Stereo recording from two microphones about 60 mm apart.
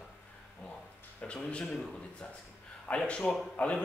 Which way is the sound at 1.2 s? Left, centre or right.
Centre.